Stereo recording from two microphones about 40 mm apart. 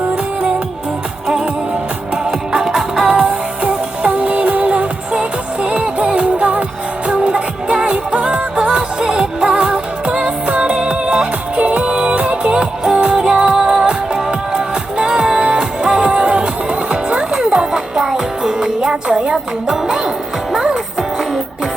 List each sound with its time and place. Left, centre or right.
2.5 s music: centre